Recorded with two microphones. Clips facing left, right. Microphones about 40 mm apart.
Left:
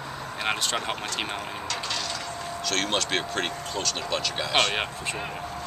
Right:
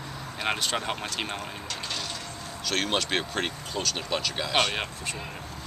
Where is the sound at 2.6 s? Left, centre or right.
Centre.